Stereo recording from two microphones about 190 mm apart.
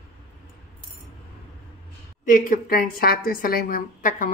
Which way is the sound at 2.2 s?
45° left (ahead or behind).